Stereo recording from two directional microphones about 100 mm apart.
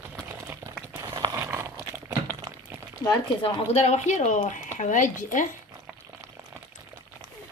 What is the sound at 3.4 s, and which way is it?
Speech, 90° left.